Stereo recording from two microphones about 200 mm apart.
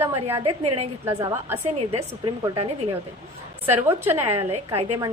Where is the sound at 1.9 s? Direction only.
25° right (ahead or behind).